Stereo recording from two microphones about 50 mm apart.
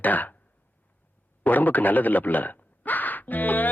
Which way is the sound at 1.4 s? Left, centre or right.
Left.